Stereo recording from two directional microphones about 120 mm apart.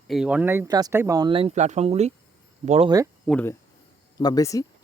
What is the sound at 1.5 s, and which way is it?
Speech, 70° right (ahead or behind).